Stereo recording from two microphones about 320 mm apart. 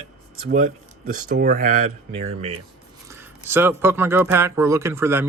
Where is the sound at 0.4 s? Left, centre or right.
Right.